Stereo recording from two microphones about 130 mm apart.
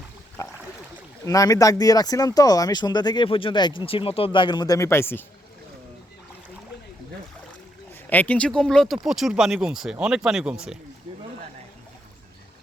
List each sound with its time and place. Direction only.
0.4 s boat: 25° left (ahead or behind)
1.2 s speech: 25° left (ahead or behind)
8.0 s speech: 15° left (ahead or behind); by 10.8 s 5° right (ahead or behind)